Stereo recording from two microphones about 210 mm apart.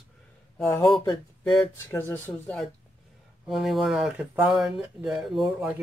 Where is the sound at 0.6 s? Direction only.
15° left (ahead or behind).